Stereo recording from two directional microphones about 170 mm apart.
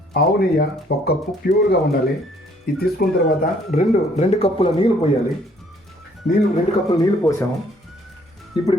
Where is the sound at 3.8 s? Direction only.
40° left (ahead or behind).